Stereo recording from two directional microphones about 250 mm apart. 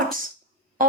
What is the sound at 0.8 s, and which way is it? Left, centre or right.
Music, right.